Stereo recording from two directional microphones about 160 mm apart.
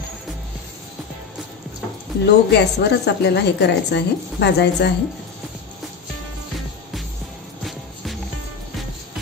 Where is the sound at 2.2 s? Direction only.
90° left.